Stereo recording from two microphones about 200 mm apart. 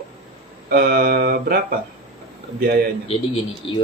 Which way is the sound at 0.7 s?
45° right (ahead or behind).